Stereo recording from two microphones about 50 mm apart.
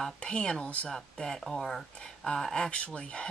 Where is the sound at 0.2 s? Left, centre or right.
Left.